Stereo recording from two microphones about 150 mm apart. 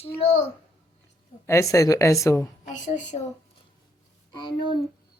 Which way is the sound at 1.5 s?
20° left (ahead or behind).